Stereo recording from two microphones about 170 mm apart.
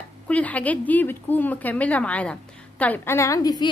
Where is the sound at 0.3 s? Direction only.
10° left (ahead or behind).